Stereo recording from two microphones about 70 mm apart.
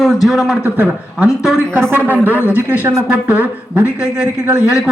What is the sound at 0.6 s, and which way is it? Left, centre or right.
A woman's voice, centre.